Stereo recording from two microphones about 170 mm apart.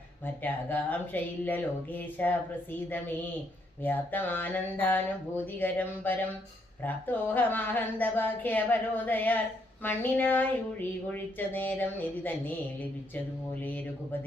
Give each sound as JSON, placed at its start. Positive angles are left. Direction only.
{"t": 0.4, "sound": "speech", "side_deg": 10}
{"t": 3.8, "sound": "speech", "side_deg": 10}